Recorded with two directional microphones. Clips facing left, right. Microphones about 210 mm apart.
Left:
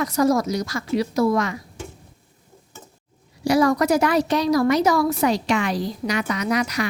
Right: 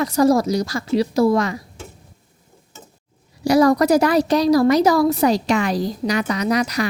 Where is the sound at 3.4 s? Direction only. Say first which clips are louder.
Right 3 dB; 40° right (ahead or behind).